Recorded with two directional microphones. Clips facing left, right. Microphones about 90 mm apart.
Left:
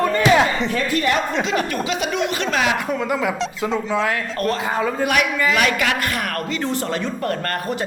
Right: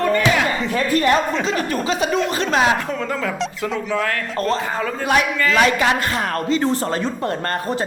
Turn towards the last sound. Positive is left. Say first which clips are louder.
# right 2 dB
turn(degrees=-30)  # may be behind; listen again after turning